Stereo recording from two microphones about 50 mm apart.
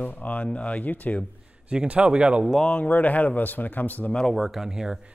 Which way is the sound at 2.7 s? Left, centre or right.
Left.